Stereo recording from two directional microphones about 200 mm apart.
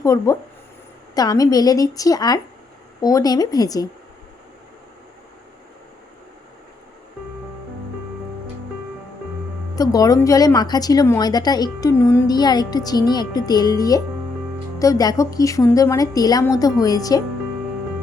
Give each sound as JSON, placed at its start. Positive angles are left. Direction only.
{"t": 0.0, "sound": "a woman's voice", "side_deg": 15}
{"t": 9.7, "sound": "a woman's voice", "side_deg": 20}